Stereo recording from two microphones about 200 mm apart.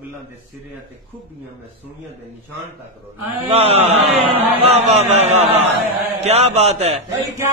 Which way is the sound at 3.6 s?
30° right (ahead or behind).